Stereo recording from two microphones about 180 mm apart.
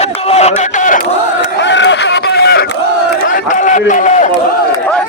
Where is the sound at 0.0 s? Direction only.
35° left (ahead or behind).